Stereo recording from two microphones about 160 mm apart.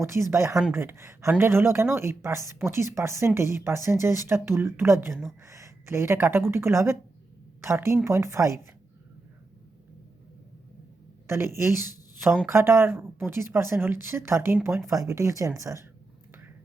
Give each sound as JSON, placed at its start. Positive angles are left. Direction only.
{"t": 0.0, "sound": "speech", "side_deg": -15}
{"t": 11.3, "sound": "a woman's voice", "side_deg": -15}